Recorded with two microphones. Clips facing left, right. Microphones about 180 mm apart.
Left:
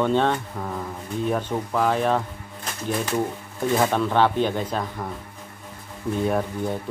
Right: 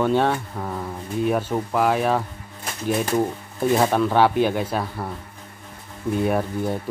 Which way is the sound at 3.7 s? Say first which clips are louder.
Right 2 dB; 10° right (ahead or behind).